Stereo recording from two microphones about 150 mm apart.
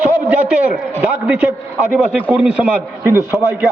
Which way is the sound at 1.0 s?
10° right (ahead or behind).